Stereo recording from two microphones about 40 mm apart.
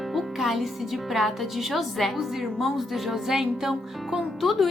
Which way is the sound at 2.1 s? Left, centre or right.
Centre.